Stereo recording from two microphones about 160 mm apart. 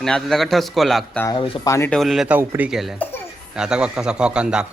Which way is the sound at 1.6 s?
20° left (ahead or behind).